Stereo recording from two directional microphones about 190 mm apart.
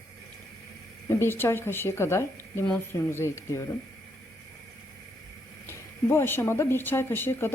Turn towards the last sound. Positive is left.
turn(degrees=10)  # may be behind; listen again after turning